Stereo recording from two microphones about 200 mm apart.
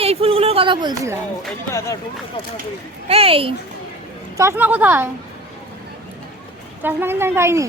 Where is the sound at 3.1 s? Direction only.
30° right (ahead or behind).